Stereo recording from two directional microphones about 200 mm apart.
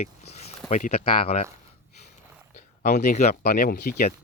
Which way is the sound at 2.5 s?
40° left (ahead or behind).